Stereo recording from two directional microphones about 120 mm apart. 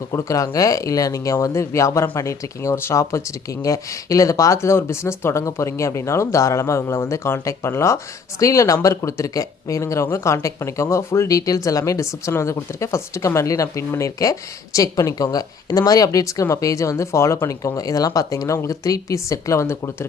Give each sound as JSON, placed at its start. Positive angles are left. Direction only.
{"t": 0.1, "sound": "speech", "side_deg": 25}